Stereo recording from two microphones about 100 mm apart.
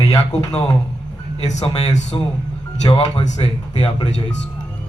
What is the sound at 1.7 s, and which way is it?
Speech, 45° left (ahead or behind).